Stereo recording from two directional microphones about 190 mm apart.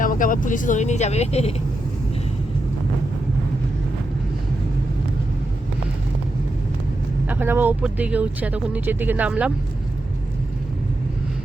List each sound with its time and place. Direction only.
0.0 s speech: 45° left (ahead or behind)
7.3 s speech: 10° right (ahead or behind)